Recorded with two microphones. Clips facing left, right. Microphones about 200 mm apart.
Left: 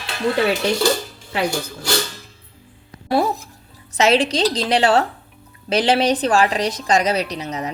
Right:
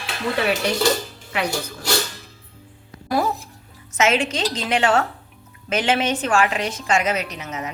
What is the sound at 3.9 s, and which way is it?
A woman's voice, 35° left (ahead or behind).